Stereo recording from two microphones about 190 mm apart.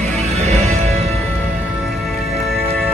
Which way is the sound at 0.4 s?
35° right (ahead or behind).